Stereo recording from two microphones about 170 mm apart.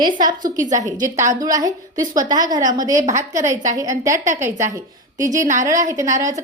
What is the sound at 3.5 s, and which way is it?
Speech, 45° right (ahead or behind).